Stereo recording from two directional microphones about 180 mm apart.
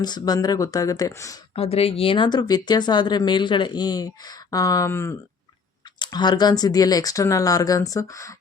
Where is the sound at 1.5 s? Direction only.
35° left (ahead or behind).